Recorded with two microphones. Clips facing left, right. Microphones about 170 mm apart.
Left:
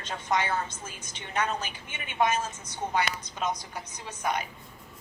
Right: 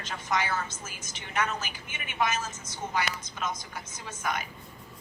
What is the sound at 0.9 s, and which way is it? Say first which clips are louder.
A woman's voice: left 2 dB; 30° left (ahead or behind).